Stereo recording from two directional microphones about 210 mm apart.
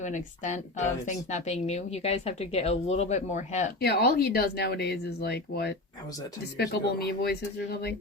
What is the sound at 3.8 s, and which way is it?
Speech, 50° left (ahead or behind).